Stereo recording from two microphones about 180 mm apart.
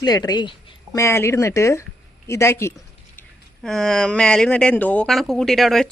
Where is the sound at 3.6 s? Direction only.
Centre (ahead or behind).